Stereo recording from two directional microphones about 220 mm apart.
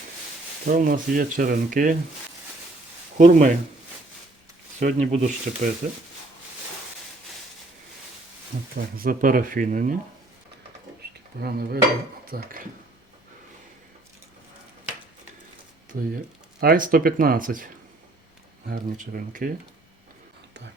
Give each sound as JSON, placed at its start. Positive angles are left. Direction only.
{"t": 0.6, "sound": "speech", "side_deg": -40}
{"t": 3.2, "sound": "speech", "side_deg": -35}
{"t": 4.8, "sound": "speech", "side_deg": -35}
{"t": 8.7, "sound": "speech", "side_deg": -40}
{"t": 11.0, "sound": "a sound", "side_deg": -50}
{"t": 11.3, "sound": "cutlery", "side_deg": -45}
{"t": 12.2, "sound": "speech", "side_deg": -40}
{"t": 15.9, "sound": "speech", "side_deg": -40}